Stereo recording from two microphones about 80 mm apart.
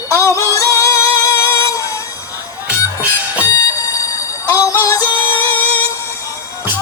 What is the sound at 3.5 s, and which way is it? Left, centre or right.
Music, left.